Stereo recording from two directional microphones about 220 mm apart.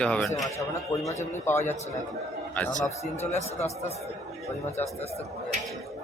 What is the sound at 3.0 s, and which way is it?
Speech, 30° left (ahead or behind).